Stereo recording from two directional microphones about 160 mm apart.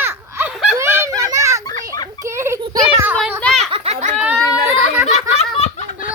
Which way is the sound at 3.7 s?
40° right (ahead or behind).